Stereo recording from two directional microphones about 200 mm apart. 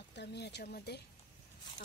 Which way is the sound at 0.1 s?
55° left (ahead or behind).